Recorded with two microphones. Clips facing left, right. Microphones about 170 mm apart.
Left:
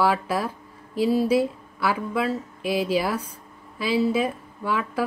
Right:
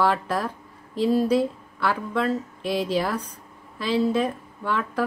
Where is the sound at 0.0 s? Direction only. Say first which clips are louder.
Even; 5° left (ahead or behind).